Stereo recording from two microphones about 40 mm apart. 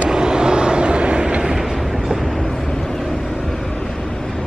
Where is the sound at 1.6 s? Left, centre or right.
Centre.